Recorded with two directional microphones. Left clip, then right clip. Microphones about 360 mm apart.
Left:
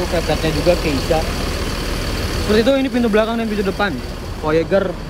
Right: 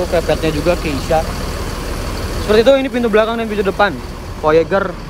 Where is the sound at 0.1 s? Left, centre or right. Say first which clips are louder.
Right 3 dB; centre.